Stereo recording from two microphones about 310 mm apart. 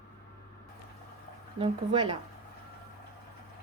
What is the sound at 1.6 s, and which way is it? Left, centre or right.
Speech, centre.